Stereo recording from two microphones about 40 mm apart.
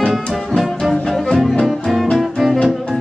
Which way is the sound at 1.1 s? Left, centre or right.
Centre.